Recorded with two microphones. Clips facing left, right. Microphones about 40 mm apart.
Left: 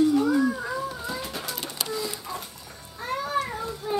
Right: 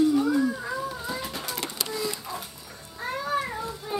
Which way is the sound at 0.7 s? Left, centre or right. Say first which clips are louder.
Even; centre.